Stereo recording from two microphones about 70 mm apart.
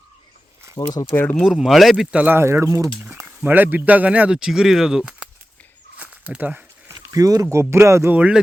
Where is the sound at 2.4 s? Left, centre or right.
Right.